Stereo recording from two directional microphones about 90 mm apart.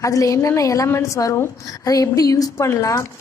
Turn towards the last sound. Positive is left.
turn(degrees=35)  # may be behind; listen again after turning